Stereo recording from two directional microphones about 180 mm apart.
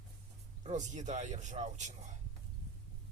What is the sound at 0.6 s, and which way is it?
A man's voice, 40° right (ahead or behind).